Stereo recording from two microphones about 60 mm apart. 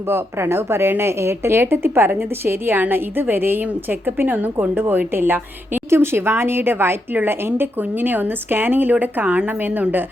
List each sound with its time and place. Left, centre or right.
0.1 s a woman's voice: right
9.2 s a woman's voice: centre
9.5 s a woman's voice: right